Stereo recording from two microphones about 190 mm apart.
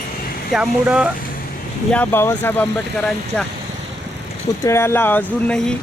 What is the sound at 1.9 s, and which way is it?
Speech, 10° left (ahead or behind).